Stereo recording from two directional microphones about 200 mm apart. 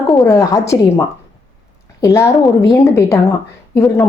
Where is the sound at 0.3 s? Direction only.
15° left (ahead or behind).